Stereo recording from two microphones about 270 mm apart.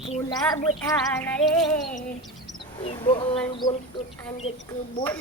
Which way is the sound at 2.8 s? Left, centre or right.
Centre.